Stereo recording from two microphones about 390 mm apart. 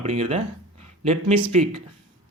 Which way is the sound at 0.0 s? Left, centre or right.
Centre.